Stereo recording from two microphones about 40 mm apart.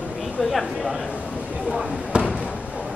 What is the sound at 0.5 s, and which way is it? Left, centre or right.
Speech, centre.